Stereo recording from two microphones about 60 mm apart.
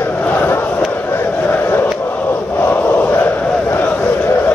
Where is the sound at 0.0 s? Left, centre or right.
Left.